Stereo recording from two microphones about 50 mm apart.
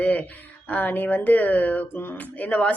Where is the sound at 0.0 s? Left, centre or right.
Left.